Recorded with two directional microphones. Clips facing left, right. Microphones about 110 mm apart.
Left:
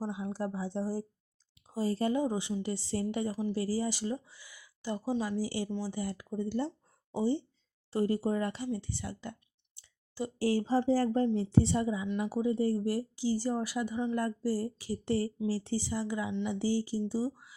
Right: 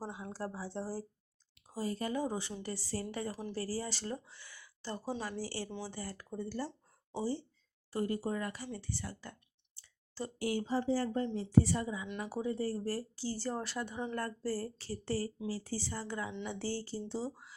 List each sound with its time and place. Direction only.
0.0 s speech: 15° left (ahead or behind)
1.7 s speech: 30° left (ahead or behind)
10.3 s speech: 30° left (ahead or behind)
11.5 s speech: 25° left (ahead or behind)
15.7 s speech: 15° left (ahead or behind)